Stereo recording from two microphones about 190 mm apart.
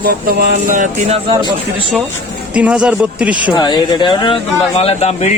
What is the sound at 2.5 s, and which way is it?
Speech, 5° right (ahead or behind).